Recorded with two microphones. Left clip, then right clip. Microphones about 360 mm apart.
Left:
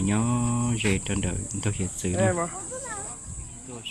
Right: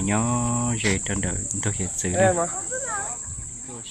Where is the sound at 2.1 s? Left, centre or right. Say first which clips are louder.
Right 5 dB; right.